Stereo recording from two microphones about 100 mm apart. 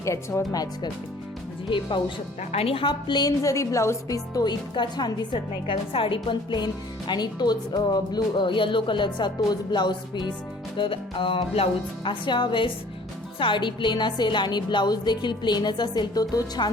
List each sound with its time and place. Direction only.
0.0 s speech: 30° left (ahead or behind)
1.7 s a woman's voice: 55° left (ahead or behind)
2.5 s a woman's voice: 75° left (ahead or behind); by 10.3 s 45° left (ahead or behind)
10.8 s speech: 60° left (ahead or behind)
12.2 s a woman's voice: 50° left (ahead or behind)